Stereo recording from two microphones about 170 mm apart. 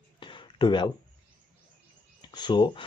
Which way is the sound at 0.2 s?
30° left (ahead or behind).